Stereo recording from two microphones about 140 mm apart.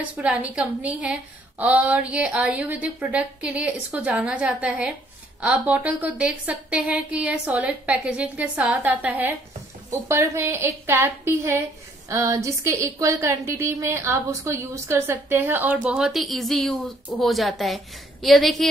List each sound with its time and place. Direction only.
0.0 s a woman's voice: 10° right (ahead or behind)